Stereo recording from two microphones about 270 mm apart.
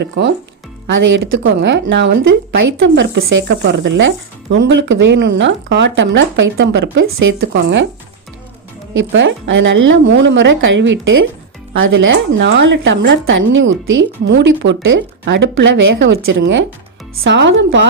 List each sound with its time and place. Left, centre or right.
0.2 s speech: right
9.0 s speech: right